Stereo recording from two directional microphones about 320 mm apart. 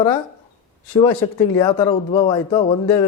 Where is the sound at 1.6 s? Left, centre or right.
Centre.